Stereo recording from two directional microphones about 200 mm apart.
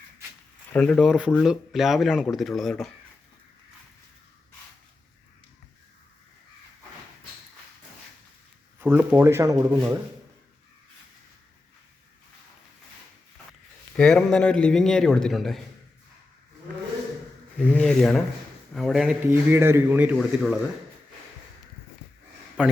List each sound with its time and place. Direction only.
0.7 s a man's voice: 5° left (ahead or behind)
8.8 s a man's voice: 10° right (ahead or behind)
13.9 s a man's voice: 5° left (ahead or behind)
17.6 s a man's voice: 5° left (ahead or behind)
22.6 s a man's voice: 5° right (ahead or behind)